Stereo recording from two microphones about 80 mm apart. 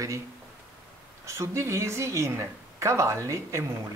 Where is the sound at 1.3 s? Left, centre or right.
Right.